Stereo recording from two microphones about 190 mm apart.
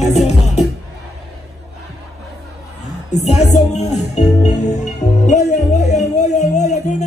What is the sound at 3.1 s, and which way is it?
Music, 35° left (ahead or behind).